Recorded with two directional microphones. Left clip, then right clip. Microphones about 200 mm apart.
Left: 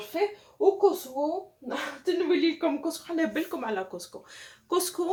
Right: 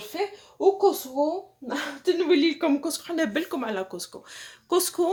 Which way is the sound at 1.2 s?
50° right (ahead or behind).